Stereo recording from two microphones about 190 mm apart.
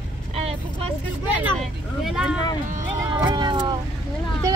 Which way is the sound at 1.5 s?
Centre (ahead or behind).